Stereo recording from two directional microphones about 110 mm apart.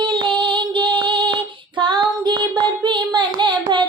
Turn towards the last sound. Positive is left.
turn(degrees=-45)  # may be behind; listen again after turning